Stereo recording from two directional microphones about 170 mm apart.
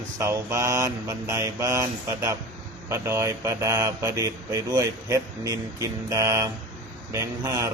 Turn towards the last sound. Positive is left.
turn(degrees=-20)  # may be behind; listen again after turning